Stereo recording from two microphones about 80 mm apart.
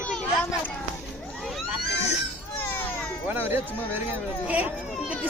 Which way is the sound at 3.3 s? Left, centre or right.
Right.